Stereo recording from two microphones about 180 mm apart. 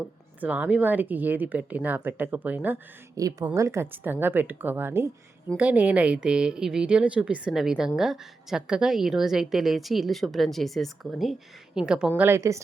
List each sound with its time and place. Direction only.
0.0 s a woman's voice: 10° right (ahead or behind)